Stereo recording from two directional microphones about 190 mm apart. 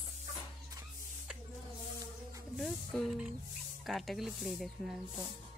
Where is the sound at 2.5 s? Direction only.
Centre (ahead or behind).